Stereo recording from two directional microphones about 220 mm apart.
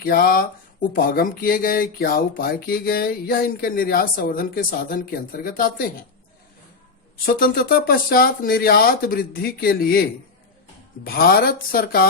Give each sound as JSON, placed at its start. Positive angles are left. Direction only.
{"t": 0.0, "sound": "speech", "side_deg": 40}
{"t": 7.3, "sound": "speech", "side_deg": 40}
{"t": 11.0, "sound": "speech", "side_deg": 40}